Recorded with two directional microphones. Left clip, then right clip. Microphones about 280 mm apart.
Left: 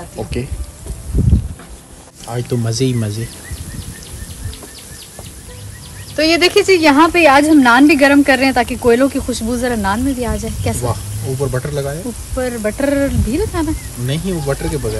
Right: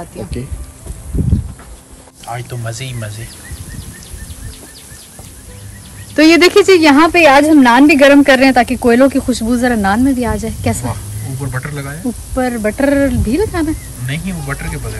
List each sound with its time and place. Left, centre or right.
2.2 s speech: centre
6.1 s speech: right
11.5 s speech: centre
12.4 s speech: right
14.0 s speech: centre